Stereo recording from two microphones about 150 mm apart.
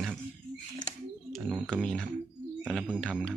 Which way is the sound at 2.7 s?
5° right (ahead or behind).